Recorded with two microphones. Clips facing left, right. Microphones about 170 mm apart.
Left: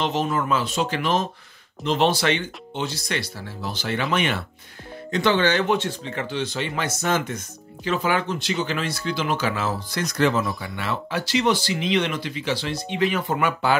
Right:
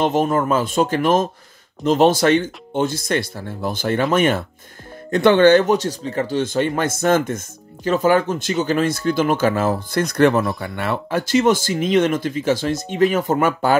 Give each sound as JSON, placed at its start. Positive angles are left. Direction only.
{"t": 0.0, "sound": "speech", "side_deg": -50}